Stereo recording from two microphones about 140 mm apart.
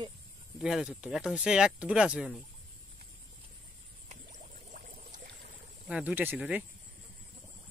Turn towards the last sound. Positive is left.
turn(degrees=-10)  # may be behind; listen again after turning